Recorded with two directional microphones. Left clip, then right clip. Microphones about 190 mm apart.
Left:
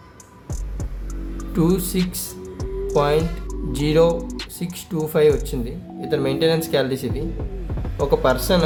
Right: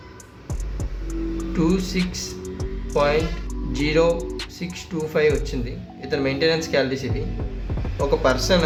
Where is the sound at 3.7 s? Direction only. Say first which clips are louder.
Left 2 dB; 65° left (ahead or behind).